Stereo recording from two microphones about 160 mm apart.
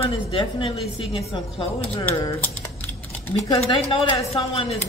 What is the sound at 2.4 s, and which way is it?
Typing, 10° left (ahead or behind).